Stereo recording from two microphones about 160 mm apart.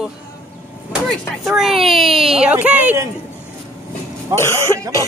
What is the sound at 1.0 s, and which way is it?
Speech, centre (ahead or behind).